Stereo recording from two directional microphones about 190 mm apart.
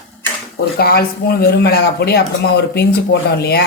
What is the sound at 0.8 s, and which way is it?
Speech, 55° left (ahead or behind).